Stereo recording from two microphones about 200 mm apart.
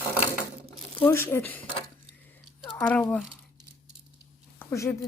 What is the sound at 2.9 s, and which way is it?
Speech, 5° left (ahead or behind).